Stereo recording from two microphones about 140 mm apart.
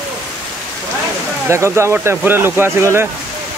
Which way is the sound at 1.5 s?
20° right (ahead or behind).